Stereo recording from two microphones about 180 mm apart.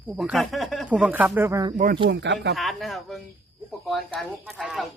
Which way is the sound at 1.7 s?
45° right (ahead or behind).